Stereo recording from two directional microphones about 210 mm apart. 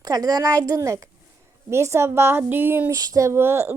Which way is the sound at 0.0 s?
15° right (ahead or behind).